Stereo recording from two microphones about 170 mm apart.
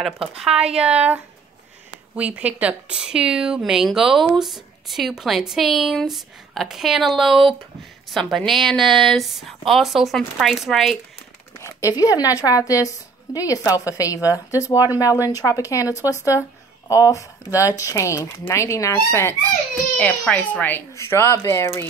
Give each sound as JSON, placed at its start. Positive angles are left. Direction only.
{"t": 0.4, "sound": "speech", "side_deg": -5}
{"t": 11.5, "sound": "a sound", "side_deg": 20}
{"t": 12.2, "sound": "a woman's voice", "side_deg": 20}